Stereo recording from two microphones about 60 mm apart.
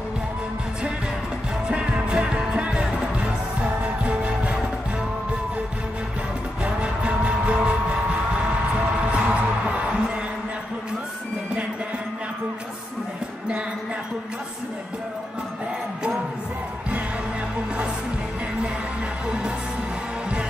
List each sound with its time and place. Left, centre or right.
1.7 s music: centre
6.6 s music: right
19.2 s music: centre